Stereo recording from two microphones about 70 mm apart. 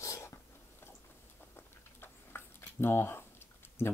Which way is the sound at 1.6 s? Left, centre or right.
Left.